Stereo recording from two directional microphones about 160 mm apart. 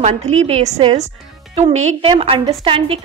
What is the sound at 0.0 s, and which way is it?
A woman's voice, 45° right (ahead or behind).